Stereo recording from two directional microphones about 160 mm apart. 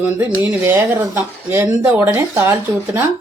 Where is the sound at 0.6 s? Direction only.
10° right (ahead or behind).